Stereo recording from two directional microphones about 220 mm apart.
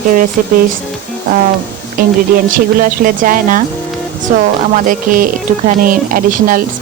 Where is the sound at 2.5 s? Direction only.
40° right (ahead or behind).